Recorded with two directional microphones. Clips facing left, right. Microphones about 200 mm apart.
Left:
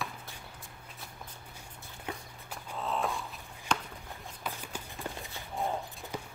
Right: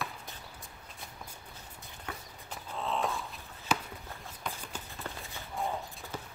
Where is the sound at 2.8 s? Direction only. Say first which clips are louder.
Even; centre (ahead or behind).